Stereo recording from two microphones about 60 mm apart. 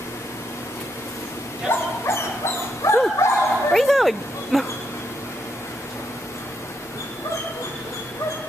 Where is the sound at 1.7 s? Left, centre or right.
Left.